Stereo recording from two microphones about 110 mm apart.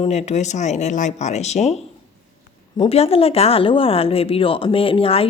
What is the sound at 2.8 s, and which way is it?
Speech, 65° left (ahead or behind).